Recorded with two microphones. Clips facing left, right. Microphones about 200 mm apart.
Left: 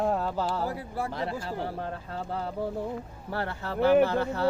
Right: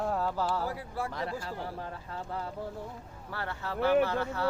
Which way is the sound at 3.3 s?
40° left (ahead or behind).